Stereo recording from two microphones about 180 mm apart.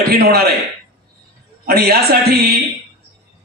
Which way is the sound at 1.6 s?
60° right (ahead or behind).